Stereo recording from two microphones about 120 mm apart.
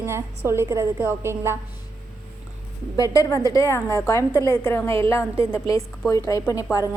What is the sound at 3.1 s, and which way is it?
A woman's voice, 25° left (ahead or behind).